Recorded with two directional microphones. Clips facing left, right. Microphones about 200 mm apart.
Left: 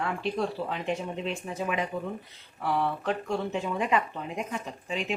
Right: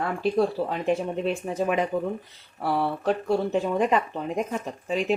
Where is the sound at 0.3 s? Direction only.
40° right (ahead or behind).